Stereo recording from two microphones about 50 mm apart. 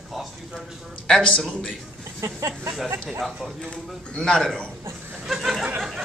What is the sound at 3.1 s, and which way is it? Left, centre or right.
Speech, centre.